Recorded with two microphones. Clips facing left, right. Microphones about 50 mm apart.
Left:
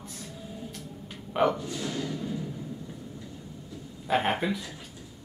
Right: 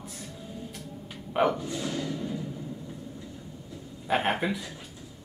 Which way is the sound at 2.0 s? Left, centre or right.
Right.